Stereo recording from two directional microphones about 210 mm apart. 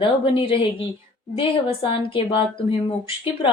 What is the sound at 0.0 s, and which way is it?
A woman's voice, 25° left (ahead or behind).